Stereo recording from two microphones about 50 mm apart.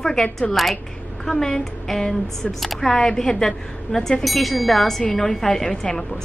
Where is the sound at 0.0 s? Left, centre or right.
Centre.